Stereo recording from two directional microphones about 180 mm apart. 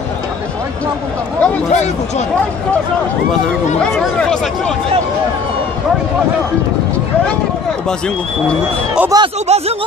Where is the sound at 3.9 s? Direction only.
5° left (ahead or behind).